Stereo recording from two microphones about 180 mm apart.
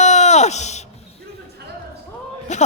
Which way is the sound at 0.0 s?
40° left (ahead or behind).